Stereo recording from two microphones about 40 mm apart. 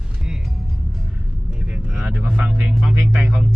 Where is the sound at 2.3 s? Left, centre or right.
Right.